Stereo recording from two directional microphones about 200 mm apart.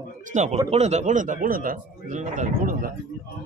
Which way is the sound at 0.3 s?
35° right (ahead or behind).